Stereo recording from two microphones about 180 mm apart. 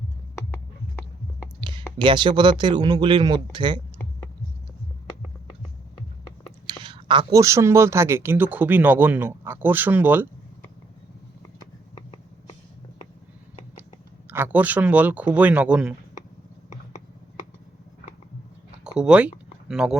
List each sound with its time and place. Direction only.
2.0 s speech: 25° right (ahead or behind)
6.7 s speech: 25° right (ahead or behind); by 10.2 s 10° right (ahead or behind)
14.3 s speech: 10° right (ahead or behind)
18.9 s speech: 5° right (ahead or behind)